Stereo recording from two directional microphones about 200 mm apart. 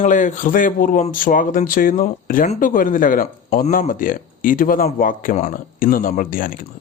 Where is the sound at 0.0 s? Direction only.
40° left (ahead or behind).